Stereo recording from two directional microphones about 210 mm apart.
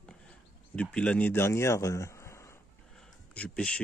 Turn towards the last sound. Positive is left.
turn(degrees=5)  # may be behind; listen again after turning